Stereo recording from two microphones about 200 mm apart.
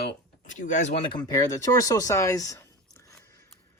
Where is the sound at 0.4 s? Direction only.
40° left (ahead or behind).